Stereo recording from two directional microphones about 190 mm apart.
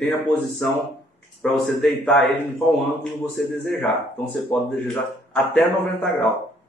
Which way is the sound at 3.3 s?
10° left (ahead or behind).